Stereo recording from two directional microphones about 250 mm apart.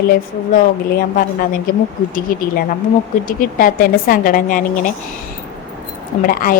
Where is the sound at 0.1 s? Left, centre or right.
Left.